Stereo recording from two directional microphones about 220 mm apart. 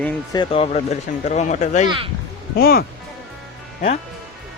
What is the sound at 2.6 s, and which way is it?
Speech, 45° left (ahead or behind).